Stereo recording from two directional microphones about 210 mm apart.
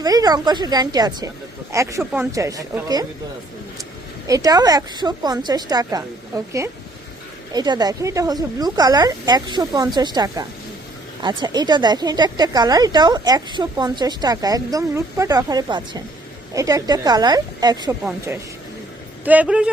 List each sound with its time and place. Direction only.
0.0 s a woman's voice: 20° right (ahead or behind)
4.3 s a woman's voice: 15° right (ahead or behind)
19.2 s a woman's voice: 5° right (ahead or behind)